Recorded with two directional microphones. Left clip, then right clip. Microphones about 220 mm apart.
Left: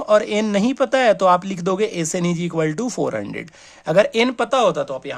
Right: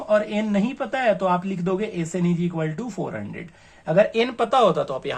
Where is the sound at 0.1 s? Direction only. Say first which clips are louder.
Left 5 dB; 55° left (ahead or behind).